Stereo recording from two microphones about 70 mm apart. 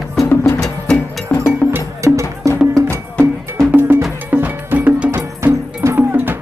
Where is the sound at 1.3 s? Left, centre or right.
Centre.